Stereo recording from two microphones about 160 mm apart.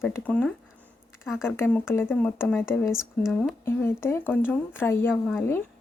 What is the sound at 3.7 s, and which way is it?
Speech, 15° left (ahead or behind).